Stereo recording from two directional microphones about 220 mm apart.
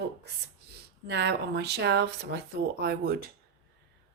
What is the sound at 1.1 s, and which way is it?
Speech, 50° right (ahead or behind).